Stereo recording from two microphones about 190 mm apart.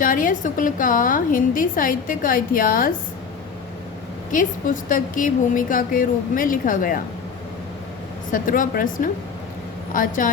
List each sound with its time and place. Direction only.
0.0 s a woman's voice: 45° left (ahead or behind)
4.3 s a woman's voice: 45° left (ahead or behind)
8.3 s a woman's voice: 45° left (ahead or behind)
9.9 s a woman's voice: 45° left (ahead or behind)